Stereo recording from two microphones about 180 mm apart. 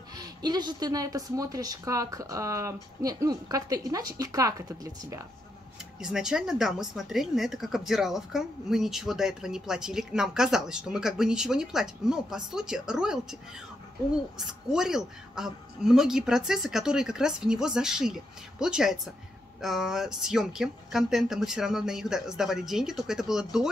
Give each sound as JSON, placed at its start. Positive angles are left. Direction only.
{"t": 0.2, "sound": "speech", "side_deg": -25}
{"t": 5.9, "sound": "a woman's voice", "side_deg": -5}
{"t": 14.7, "sound": "a woman's voice", "side_deg": -5}